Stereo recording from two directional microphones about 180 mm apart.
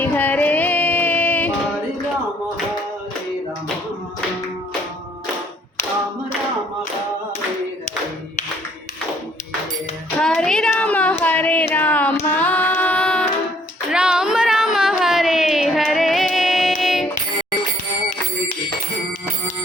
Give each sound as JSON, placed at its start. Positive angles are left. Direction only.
{"t": 0.0, "sound": "music", "side_deg": 10}
{"t": 10.2, "sound": "child singing", "side_deg": 5}
{"t": 13.9, "sound": "a sound", "side_deg": -5}